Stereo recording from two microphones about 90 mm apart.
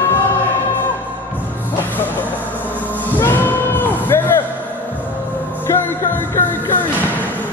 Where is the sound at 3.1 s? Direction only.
20° left (ahead or behind).